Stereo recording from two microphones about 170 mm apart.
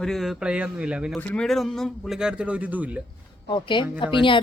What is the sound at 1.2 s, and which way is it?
A man's voice, 5° left (ahead or behind).